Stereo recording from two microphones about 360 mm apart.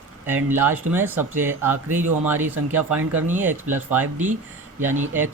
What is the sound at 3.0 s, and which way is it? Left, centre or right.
Speech, right.